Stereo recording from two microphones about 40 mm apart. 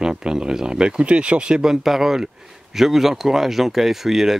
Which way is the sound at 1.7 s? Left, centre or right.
Centre.